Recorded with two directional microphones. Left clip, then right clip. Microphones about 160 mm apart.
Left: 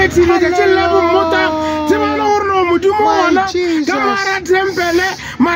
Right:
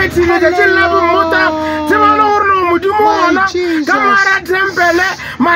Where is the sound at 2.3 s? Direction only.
40° right (ahead or behind).